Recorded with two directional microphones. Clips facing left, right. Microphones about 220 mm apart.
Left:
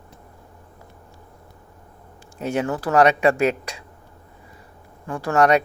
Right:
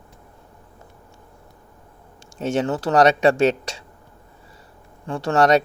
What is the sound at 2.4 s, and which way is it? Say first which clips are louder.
Speech: right 2 dB; 25° right (ahead or behind).